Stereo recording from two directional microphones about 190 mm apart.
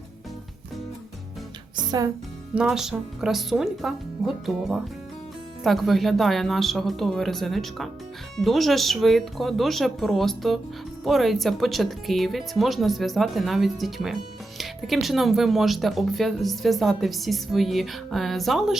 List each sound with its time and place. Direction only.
1.7 s music: 20° right (ahead or behind)
2.6 s speech: 5° right (ahead or behind)